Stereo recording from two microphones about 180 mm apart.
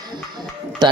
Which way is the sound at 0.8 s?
20° right (ahead or behind).